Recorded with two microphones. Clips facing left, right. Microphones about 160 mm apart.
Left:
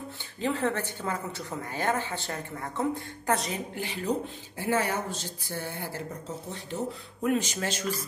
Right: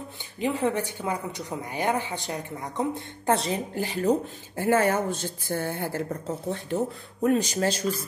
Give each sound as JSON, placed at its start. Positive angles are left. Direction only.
{"t": 0.4, "sound": "a woman's voice", "side_deg": -15}
{"t": 3.3, "sound": "speech", "side_deg": -30}
{"t": 7.2, "sound": "speech", "side_deg": -35}